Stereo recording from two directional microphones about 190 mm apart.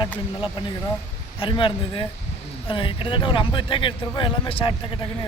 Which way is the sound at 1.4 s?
25° left (ahead or behind).